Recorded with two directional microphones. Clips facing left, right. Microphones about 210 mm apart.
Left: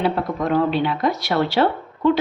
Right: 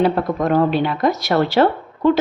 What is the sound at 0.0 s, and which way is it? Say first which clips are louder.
A woman's voice: right 4 dB; 45° right (ahead or behind).